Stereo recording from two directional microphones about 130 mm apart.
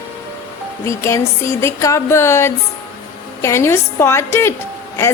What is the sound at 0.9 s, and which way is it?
A woman's voice, 20° left (ahead or behind).